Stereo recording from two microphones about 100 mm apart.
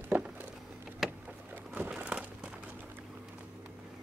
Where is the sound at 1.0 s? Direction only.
5° right (ahead or behind).